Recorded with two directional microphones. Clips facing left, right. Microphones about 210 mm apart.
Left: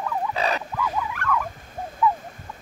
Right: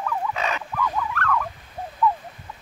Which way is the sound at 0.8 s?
10° left (ahead or behind).